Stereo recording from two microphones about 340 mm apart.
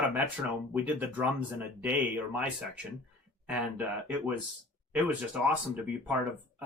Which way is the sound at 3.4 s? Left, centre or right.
Centre.